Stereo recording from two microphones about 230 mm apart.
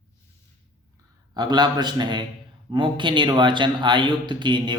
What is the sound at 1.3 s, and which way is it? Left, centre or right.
A man's voice, centre.